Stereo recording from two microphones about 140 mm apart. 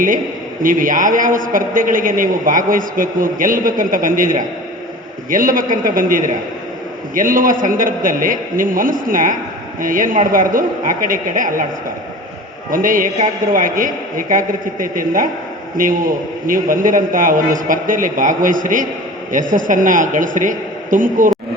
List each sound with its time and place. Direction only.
0.6 s a man's voice: 75° right (ahead or behind)
12.7 s a man's voice: 80° right